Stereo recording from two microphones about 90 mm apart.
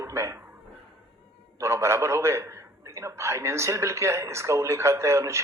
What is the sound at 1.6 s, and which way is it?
A man's voice, 30° right (ahead or behind).